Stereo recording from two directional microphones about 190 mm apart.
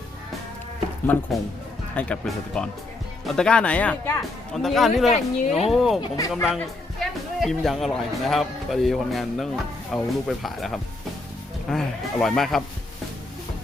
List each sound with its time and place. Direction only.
1.0 s speech: 10° left (ahead or behind)
6.0 s speech: 15° left (ahead or behind)
6.3 s speech: centre (ahead or behind)